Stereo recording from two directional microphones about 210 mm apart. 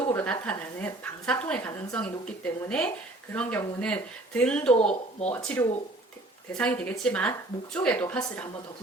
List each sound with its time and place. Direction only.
0.1 s a woman's voice: 10° left (ahead or behind)